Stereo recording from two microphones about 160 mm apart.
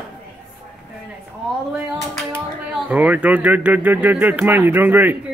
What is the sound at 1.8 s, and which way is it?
Speech, 20° right (ahead or behind).